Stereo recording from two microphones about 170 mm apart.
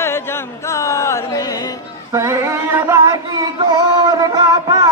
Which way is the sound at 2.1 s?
15° right (ahead or behind).